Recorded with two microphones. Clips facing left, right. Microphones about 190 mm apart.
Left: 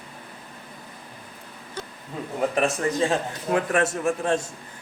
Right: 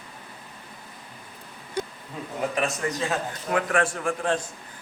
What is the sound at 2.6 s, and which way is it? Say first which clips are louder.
A man's voice: left 4 dB; 30° left (ahead or behind).